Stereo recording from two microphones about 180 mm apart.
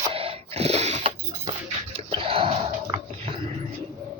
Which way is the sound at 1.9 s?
30° right (ahead or behind).